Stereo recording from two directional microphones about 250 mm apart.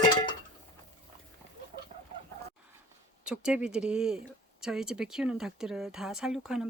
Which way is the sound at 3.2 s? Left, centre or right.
Centre.